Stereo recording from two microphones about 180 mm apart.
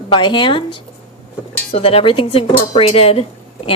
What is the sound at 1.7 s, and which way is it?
A woman's voice, 35° left (ahead or behind).